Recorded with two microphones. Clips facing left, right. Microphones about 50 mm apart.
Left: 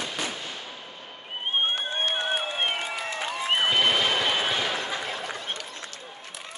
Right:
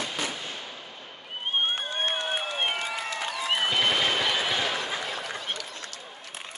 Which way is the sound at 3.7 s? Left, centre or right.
Centre.